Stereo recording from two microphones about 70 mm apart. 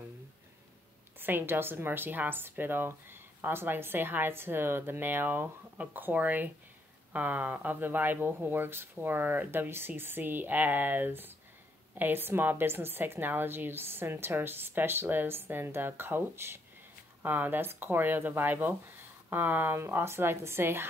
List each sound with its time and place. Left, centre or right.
1.2 s speech: right